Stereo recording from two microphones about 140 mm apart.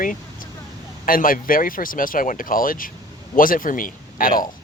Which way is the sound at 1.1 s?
90° left.